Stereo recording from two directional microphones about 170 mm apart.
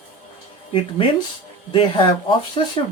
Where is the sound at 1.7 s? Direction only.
30° left (ahead or behind).